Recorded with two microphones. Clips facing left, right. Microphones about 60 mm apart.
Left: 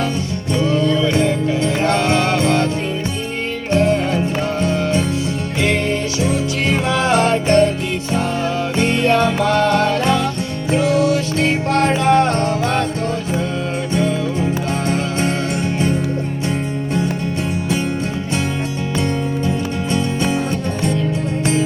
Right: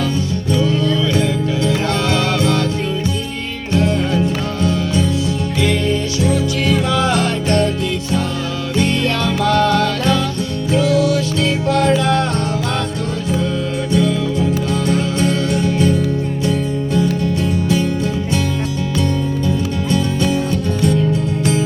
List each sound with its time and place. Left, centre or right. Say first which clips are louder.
0.5 s music: left 1 dB; left
3.7 s music: left 1 dB; left
6.2 s music: right 3 dB; left
8.7 s music: left 1 dB; left
13.9 s music: right 3 dB; left
19.5 s music: right 2 dB; left